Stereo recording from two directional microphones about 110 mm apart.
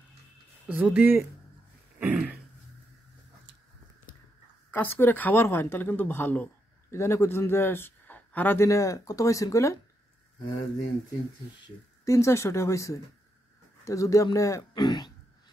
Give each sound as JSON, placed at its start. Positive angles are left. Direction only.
{"t": 0.7, "sound": "speech", "side_deg": -15}
{"t": 2.0, "sound": "throat clearing", "side_deg": -15}
{"t": 4.6, "sound": "a woman's voice", "side_deg": 20}
{"t": 8.6, "sound": "a woman's voice", "side_deg": 30}
{"t": 12.0, "sound": "a woman's voice", "side_deg": 25}
{"t": 14.7, "sound": "speech", "side_deg": 40}